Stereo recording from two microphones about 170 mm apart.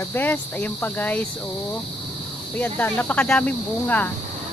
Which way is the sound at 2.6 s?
10° left (ahead or behind).